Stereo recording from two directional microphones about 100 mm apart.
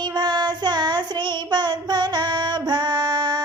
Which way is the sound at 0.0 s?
45° right (ahead or behind).